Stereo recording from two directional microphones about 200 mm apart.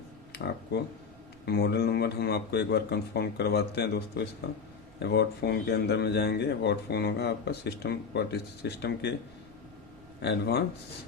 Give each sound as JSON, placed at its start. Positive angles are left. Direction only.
{"t": 0.3, "sound": "speech", "side_deg": 55}
{"t": 10.2, "sound": "speech", "side_deg": 55}